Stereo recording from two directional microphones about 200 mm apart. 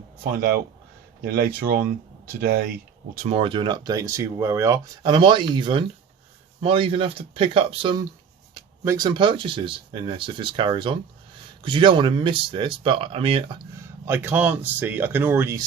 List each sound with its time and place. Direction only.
0.2 s speech: 45° right (ahead or behind)
3.2 s speech: 30° right (ahead or behind)
13.7 s speech: 10° right (ahead or behind)